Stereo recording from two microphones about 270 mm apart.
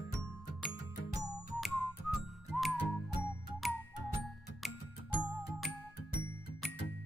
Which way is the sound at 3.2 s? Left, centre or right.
Centre.